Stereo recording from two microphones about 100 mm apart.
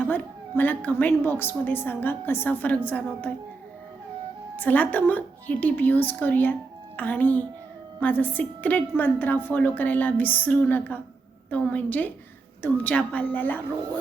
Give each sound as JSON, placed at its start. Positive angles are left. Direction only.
{"t": 0.0, "sound": "a woman's voice", "side_deg": 20}
{"t": 4.5, "sound": "a woman's voice", "side_deg": 15}